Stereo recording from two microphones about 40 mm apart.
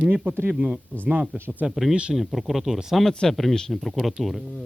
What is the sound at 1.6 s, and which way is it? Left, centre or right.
Speech, right.